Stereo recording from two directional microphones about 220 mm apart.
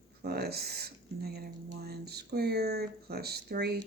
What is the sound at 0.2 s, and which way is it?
Speech, 45° right (ahead or behind).